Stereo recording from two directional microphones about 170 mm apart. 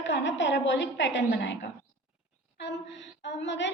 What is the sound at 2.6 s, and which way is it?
A woman's voice, 90° left.